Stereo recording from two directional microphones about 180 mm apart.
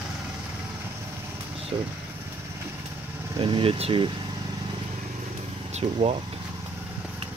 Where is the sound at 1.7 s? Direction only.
25° right (ahead or behind).